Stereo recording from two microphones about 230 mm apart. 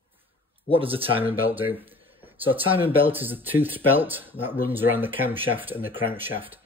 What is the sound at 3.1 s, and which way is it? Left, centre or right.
Speech, centre.